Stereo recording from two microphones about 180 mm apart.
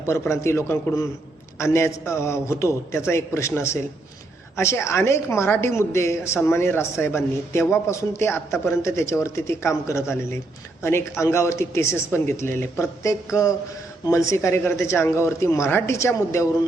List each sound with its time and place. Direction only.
0.0 s speech: 15° left (ahead or behind)